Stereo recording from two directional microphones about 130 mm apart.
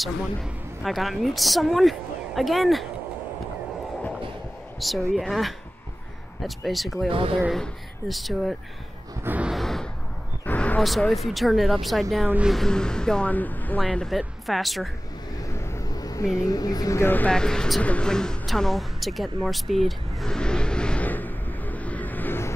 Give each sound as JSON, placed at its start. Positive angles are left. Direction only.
{"t": 0.0, "sound": "a woman's voice", "side_deg": 0}
{"t": 4.7, "sound": "a woman's voice", "side_deg": 0}
{"t": 7.1, "sound": "speech", "side_deg": -45}
{"t": 7.5, "sound": "a woman's voice", "side_deg": 0}
{"t": 9.2, "sound": "a sound", "side_deg": -15}
{"t": 9.5, "sound": "a sound", "side_deg": 0}
{"t": 10.4, "sound": "a sound", "side_deg": 10}
{"t": 10.8, "sound": "a woman's voice", "side_deg": 0}
{"t": 12.3, "sound": "speech", "side_deg": -10}
{"t": 12.5, "sound": "a woman's voice", "side_deg": 5}
{"t": 15.3, "sound": "vehicle", "side_deg": 25}